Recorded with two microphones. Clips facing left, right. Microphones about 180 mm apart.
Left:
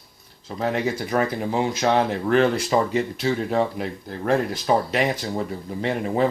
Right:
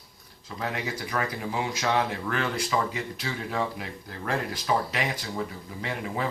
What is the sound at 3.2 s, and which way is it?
Speech, 30° left (ahead or behind).